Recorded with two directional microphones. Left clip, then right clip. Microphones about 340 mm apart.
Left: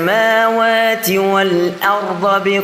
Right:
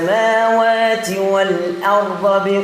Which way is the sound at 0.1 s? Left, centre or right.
Left.